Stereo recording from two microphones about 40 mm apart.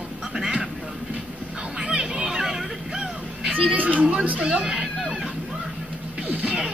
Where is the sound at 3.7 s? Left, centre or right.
Right.